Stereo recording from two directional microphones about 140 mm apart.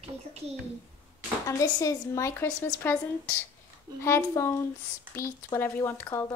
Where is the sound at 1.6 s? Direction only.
25° left (ahead or behind).